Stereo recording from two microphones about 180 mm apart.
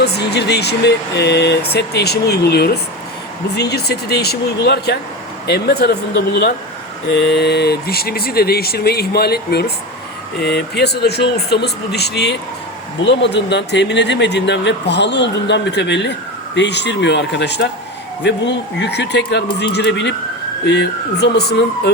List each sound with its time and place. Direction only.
0.0 s speech: 65° left (ahead or behind)